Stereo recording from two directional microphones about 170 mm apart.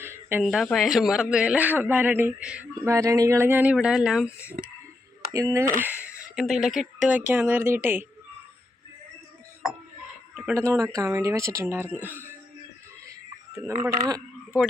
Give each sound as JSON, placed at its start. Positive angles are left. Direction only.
{"t": 0.0, "sound": "a sound", "side_deg": -15}
{"t": 0.4, "sound": "a man's voice", "side_deg": 0}
{"t": 2.8, "sound": "speech", "side_deg": -15}
{"t": 5.3, "sound": "a man's voice", "side_deg": -20}
{"t": 10.3, "sound": "speech", "side_deg": -10}
{"t": 13.8, "sound": "speech", "side_deg": -20}